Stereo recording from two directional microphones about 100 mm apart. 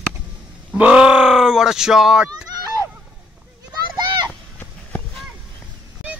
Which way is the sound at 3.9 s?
45° right (ahead or behind).